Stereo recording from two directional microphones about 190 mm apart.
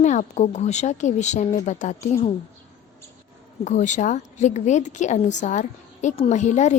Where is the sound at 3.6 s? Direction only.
40° left (ahead or behind).